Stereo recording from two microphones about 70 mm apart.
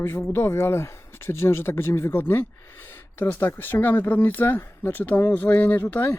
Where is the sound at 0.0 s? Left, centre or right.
Left.